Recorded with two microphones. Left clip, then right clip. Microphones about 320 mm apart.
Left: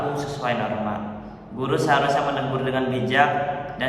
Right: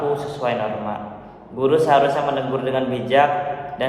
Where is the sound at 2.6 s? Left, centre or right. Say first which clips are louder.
Right 3 dB; centre.